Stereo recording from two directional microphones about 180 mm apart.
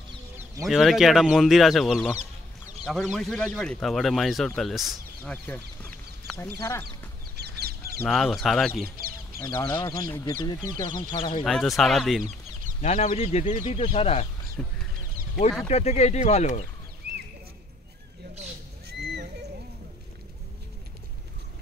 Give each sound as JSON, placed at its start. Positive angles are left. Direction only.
{"t": 0.7, "sound": "speech", "side_deg": 0}
{"t": 5.3, "sound": "chicken", "side_deg": 10}
{"t": 6.6, "sound": "speech", "side_deg": 15}
{"t": 7.3, "sound": "a sound", "side_deg": -65}
{"t": 8.0, "sound": "speech", "side_deg": 0}
{"t": 9.4, "sound": "speech", "side_deg": 20}
{"t": 11.4, "sound": "speech", "side_deg": 0}
{"t": 12.8, "sound": "speech", "side_deg": 35}
{"t": 14.6, "sound": "speech", "side_deg": 0}
{"t": 15.7, "sound": "speech", "side_deg": 40}
{"t": 17.0, "sound": "clip-clop", "side_deg": -65}